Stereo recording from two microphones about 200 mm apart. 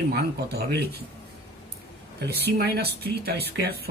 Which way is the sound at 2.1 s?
55° right (ahead or behind).